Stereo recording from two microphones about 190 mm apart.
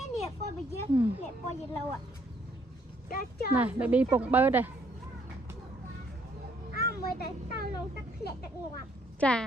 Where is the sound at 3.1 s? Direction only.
50° left (ahead or behind).